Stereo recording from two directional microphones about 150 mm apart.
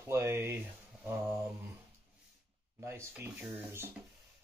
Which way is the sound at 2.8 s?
15° right (ahead or behind).